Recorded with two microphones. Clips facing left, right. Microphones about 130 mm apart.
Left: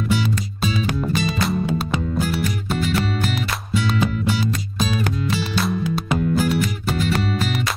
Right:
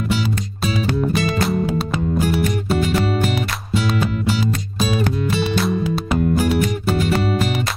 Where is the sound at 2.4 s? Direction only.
50° right (ahead or behind).